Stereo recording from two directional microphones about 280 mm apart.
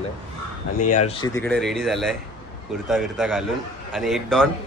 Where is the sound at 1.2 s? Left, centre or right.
Centre.